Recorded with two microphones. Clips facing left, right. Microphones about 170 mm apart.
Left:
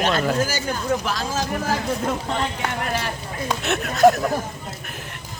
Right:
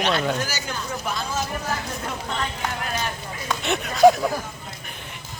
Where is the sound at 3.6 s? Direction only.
Centre (ahead or behind).